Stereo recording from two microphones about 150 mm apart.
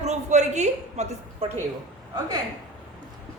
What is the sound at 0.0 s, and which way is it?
A woman's voice, 50° right (ahead or behind).